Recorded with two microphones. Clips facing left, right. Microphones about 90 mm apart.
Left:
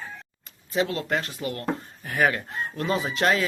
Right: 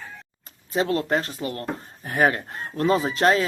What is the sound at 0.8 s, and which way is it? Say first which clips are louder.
Speech: right 5 dB; 35° right (ahead or behind).